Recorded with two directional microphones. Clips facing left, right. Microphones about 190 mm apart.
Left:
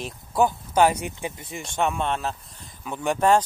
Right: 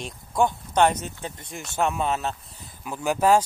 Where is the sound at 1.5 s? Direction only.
Centre (ahead or behind).